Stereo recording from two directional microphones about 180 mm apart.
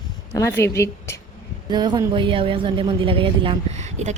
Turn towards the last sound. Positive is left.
turn(degrees=-40)  # may be behind; listen again after turning